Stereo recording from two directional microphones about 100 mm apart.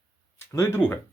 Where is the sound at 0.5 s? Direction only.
25° left (ahead or behind).